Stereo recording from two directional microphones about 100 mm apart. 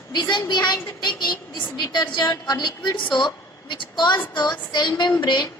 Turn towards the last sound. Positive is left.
turn(degrees=50)  # may be behind; listen again after turning